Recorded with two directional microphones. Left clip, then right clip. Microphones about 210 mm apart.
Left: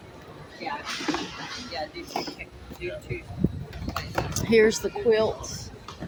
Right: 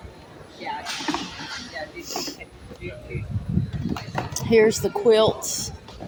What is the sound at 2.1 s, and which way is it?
Speech, 15° right (ahead or behind).